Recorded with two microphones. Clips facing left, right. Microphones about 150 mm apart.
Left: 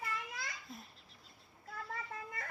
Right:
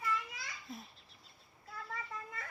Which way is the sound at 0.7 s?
Centre (ahead or behind).